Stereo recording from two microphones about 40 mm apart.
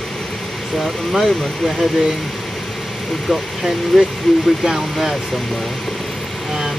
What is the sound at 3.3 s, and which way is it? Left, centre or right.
Speech, centre.